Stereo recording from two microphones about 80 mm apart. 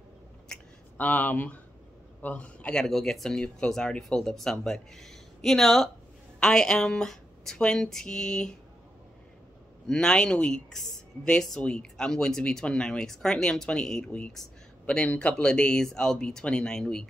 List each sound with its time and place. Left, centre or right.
0.5 s a sound: centre
0.9 s speech: left
9.8 s speech: centre